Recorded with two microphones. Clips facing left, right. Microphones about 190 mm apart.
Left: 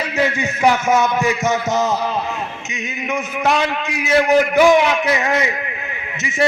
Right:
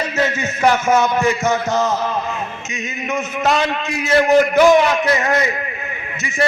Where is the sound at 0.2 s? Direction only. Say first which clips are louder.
Left 1 dB; 15° left (ahead or behind).